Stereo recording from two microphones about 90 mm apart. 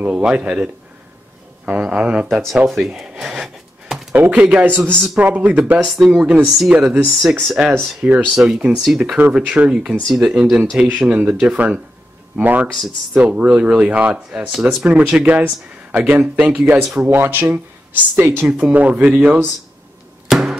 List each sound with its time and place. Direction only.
0.0 s speech: 10° right (ahead or behind)
1.7 s speech: 10° right (ahead or behind)
2.2 s a sound: 5° right (ahead or behind)
4.1 s speech: 15° right (ahead or behind)
5.9 s speech: 5° right (ahead or behind)
20.2 s a sound: 5° right (ahead or behind)